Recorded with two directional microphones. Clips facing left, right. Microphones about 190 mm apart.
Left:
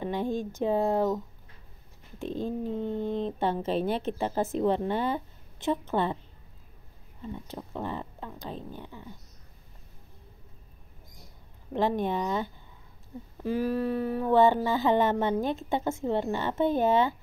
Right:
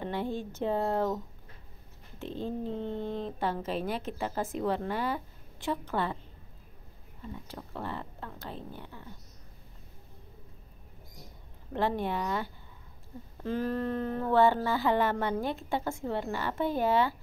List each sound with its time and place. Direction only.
0.0 s speech: 15° left (ahead or behind)
7.4 s speech: 20° left (ahead or behind)
11.7 s speech: 15° left (ahead or behind)